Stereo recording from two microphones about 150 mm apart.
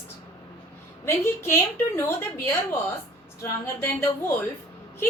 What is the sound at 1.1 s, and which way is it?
A woman's voice, 15° left (ahead or behind).